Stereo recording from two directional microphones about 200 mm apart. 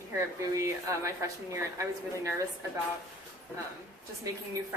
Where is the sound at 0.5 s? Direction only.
15° right (ahead or behind).